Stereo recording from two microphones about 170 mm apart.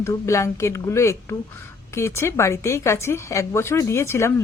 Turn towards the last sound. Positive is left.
turn(degrees=15)  # may be behind; listen again after turning